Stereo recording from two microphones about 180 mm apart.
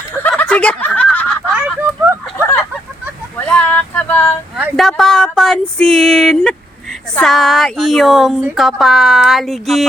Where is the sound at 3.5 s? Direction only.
10° left (ahead or behind).